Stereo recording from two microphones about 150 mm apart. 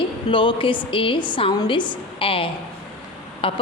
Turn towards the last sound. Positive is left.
turn(degrees=35)  # may be behind; listen again after turning